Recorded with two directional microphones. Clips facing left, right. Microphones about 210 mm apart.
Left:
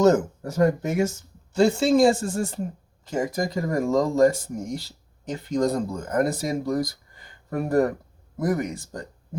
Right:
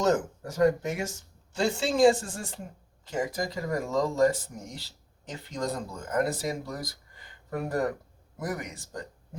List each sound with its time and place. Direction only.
0.0 s speech: 45° left (ahead or behind)